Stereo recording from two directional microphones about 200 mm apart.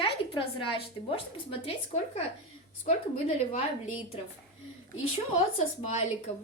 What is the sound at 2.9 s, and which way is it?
Speech, 40° left (ahead or behind).